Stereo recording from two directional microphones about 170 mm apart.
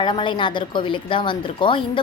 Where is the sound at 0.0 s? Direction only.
30° left (ahead or behind).